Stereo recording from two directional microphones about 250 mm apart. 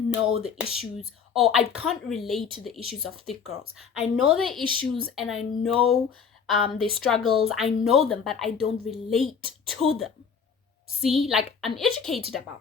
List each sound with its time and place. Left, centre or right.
0.1 s a woman's voice: centre
4.6 s speech: centre
5.1 s a woman's voice: centre